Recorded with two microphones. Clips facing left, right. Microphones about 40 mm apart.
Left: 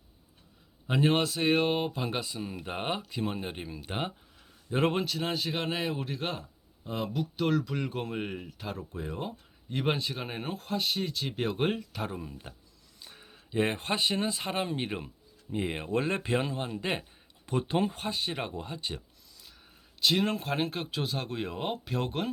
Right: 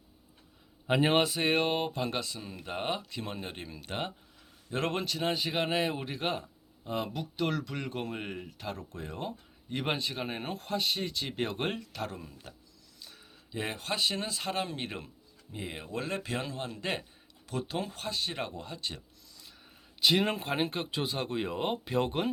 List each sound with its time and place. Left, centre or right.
0.9 s speech: centre
5.0 s speech: centre
15.5 s speech: left
17.4 s speech: left
20.0 s speech: centre